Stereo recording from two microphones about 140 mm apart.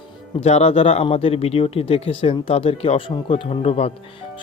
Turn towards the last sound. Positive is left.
turn(degrees=45)  # may be behind; listen again after turning